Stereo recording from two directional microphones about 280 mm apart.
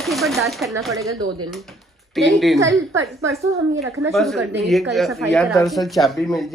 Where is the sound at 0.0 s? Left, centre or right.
Centre.